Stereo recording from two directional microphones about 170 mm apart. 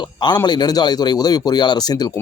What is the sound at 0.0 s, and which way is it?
Speech, 25° left (ahead or behind).